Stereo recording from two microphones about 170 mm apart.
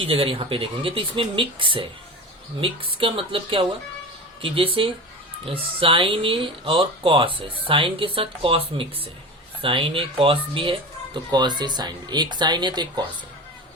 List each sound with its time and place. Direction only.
0.0 s speech: 35° right (ahead or behind)